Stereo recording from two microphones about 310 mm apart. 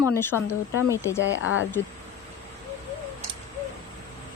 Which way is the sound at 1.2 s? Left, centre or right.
Left.